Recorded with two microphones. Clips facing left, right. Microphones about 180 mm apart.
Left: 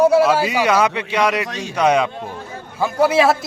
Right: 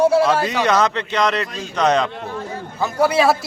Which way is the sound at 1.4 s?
75° left (ahead or behind).